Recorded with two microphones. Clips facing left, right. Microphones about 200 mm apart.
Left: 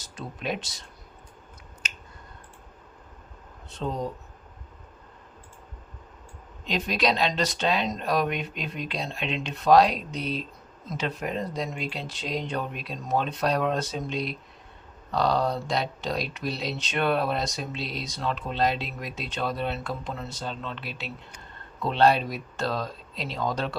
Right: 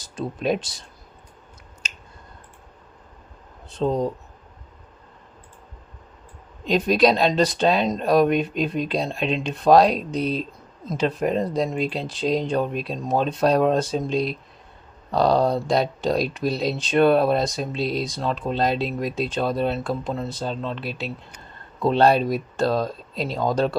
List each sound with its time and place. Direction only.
0.2 s speech: 40° right (ahead or behind)
3.8 s speech: 35° right (ahead or behind)
6.8 s speech: 35° right (ahead or behind)